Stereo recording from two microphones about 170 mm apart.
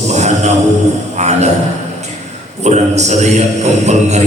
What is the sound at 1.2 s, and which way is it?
Speech, 40° right (ahead or behind).